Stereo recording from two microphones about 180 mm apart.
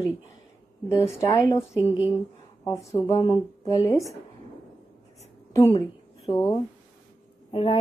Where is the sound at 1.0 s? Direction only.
15° left (ahead or behind).